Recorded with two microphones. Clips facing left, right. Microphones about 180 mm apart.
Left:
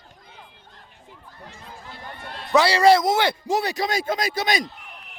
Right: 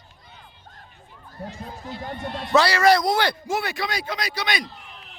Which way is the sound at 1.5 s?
40° right (ahead or behind).